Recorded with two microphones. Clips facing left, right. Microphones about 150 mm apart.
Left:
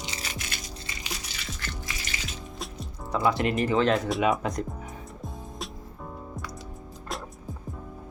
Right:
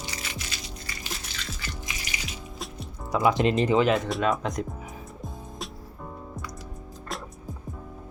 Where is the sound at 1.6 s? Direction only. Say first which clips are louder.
Even; 15° right (ahead or behind).